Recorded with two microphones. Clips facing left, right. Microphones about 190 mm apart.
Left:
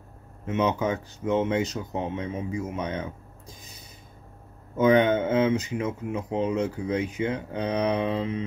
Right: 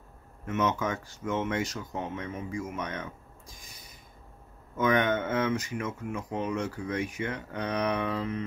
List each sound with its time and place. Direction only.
0.5 s speech: 20° left (ahead or behind)
4.7 s speech: 25° left (ahead or behind)